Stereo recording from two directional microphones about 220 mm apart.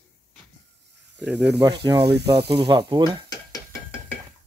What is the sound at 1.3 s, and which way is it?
Speech, 50° right (ahead or behind).